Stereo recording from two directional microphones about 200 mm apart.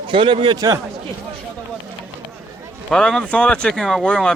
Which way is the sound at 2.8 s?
5° left (ahead or behind).